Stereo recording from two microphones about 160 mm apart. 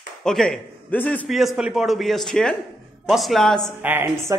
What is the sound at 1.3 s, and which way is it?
Speech, centre (ahead or behind).